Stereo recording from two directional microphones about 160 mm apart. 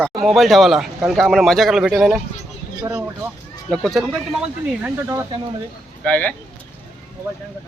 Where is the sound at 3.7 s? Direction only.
Centre (ahead or behind).